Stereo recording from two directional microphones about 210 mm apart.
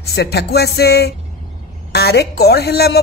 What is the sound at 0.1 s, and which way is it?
Speech, 50° left (ahead or behind).